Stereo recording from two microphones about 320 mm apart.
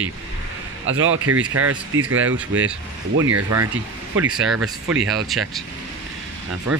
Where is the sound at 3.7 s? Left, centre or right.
Centre.